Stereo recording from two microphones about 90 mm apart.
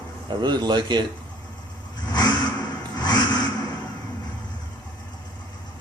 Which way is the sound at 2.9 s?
50° left (ahead or behind).